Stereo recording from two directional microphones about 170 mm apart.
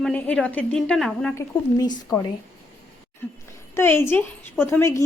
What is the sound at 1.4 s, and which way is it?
Speech, 20° left (ahead or behind).